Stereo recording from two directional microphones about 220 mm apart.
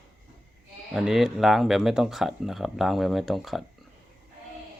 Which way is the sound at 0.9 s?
Centre (ahead or behind).